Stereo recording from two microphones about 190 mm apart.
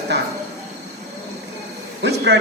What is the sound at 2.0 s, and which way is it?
Speech, 65° right (ahead or behind).